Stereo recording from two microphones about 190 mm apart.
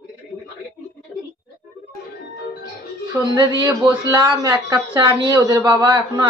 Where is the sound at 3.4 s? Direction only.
20° right (ahead or behind).